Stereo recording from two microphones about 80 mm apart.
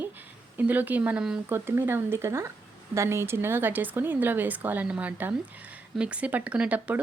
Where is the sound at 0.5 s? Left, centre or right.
Right.